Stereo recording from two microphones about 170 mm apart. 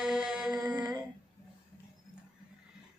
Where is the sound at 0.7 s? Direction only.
25° right (ahead or behind).